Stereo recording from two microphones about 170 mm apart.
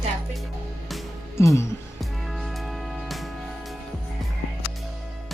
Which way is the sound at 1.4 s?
15° left (ahead or behind).